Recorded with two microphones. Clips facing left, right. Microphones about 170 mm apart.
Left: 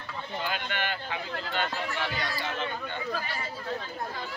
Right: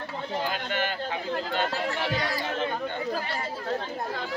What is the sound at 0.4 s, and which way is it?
Speech, 40° right (ahead or behind).